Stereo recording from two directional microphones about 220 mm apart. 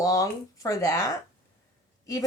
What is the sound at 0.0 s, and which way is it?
Speech, 15° left (ahead or behind).